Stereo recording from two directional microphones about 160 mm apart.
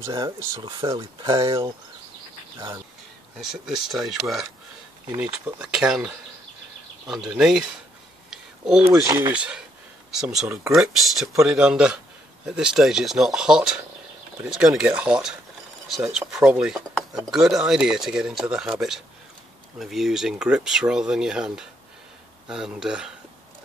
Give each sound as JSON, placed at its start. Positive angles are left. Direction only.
{"t": 0.0, "sound": "speech", "side_deg": -20}
{"t": 3.3, "sound": "speech", "side_deg": 0}
{"t": 7.3, "sound": "speech", "side_deg": -5}
{"t": 8.3, "sound": "a sound", "side_deg": -5}
{"t": 9.0, "sound": "speech", "side_deg": -20}
{"t": 9.3, "sound": "speech", "side_deg": -5}